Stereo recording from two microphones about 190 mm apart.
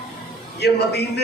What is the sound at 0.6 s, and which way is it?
Speech, 60° left (ahead or behind).